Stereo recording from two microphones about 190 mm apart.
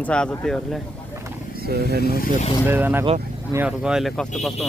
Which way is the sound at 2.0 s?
50° left (ahead or behind).